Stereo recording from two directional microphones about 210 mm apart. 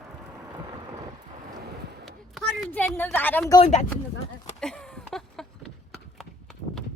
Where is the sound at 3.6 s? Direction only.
35° left (ahead or behind).